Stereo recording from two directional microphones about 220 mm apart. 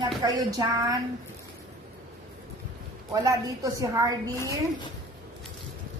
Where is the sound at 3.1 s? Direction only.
15° right (ahead or behind).